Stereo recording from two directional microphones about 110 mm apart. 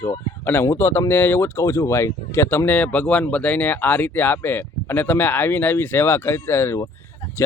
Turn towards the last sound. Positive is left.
turn(degrees=25)  # may be behind; listen again after turning